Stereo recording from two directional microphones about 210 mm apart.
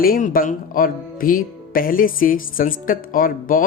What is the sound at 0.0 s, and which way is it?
Speech, 45° left (ahead or behind).